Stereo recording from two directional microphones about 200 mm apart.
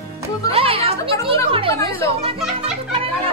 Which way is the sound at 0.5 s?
30° right (ahead or behind).